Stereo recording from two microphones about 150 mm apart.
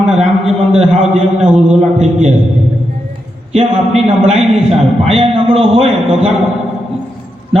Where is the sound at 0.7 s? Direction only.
45° right (ahead or behind).